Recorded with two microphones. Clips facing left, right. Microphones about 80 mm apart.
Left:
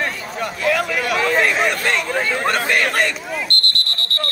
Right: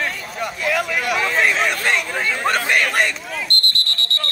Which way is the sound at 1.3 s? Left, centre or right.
Centre.